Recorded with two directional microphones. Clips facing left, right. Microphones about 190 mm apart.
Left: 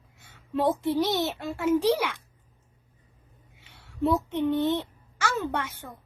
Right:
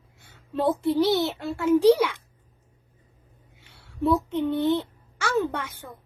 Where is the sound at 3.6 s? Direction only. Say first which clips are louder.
Right 2 dB; 15° left (ahead or behind).